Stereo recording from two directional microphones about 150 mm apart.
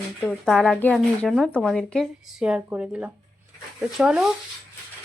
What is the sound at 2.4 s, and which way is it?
Speech, 10° right (ahead or behind).